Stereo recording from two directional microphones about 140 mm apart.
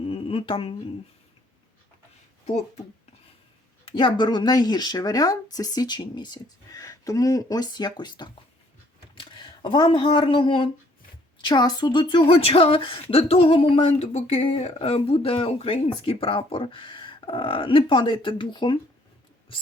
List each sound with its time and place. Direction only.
0.0 s humming: 40° left (ahead or behind)
3.8 s speech: 35° left (ahead or behind)